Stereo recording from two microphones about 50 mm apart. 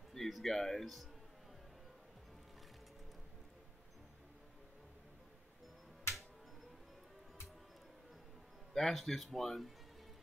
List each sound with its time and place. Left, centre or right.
0.1 s speech: centre
8.7 s speech: centre